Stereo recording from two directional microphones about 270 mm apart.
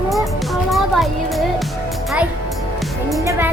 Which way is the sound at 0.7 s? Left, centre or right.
Centre.